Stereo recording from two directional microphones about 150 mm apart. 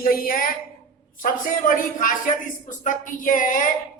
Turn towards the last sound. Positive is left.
turn(degrees=60)  # may be behind; listen again after turning